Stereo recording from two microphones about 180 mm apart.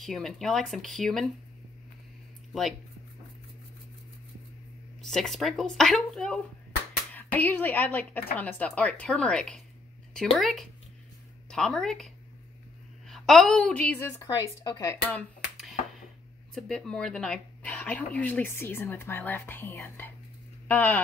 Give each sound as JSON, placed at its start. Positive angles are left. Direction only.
{"t": 0.0, "sound": "speech", "side_deg": 0}
{"t": 5.0, "sound": "speech", "side_deg": 5}
{"t": 13.1, "sound": "speech", "side_deg": 0}
{"t": 16.5, "sound": "speech", "side_deg": 0}